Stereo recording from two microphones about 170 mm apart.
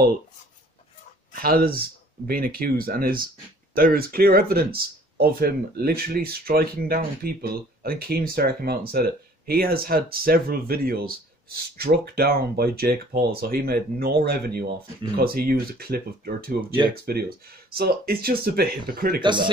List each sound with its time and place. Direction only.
1.3 s speech: 60° right (ahead or behind)
19.2 s speech: 25° right (ahead or behind)